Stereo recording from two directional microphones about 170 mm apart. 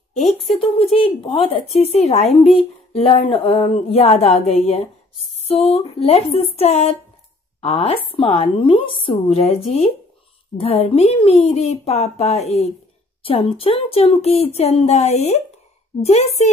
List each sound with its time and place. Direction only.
0.7 s speech: 30° left (ahead or behind)